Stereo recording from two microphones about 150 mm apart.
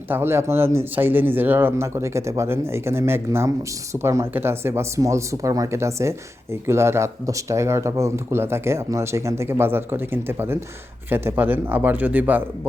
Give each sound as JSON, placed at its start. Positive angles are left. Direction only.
{"t": 0.1, "sound": "speech", "side_deg": -15}